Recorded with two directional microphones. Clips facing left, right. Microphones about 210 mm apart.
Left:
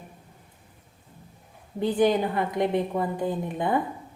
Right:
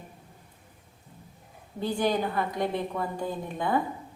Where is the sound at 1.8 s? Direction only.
20° left (ahead or behind).